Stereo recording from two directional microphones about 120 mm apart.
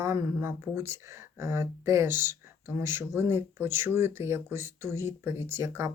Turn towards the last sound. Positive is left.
turn(degrees=-20)  # may be behind; listen again after turning